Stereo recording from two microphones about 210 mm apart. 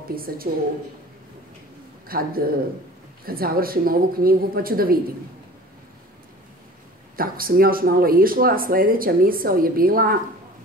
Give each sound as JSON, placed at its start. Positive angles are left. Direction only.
{"t": 0.1, "sound": "speech", "side_deg": -45}
{"t": 2.0, "sound": "a man's voice", "side_deg": -45}
{"t": 7.2, "sound": "speech", "side_deg": -45}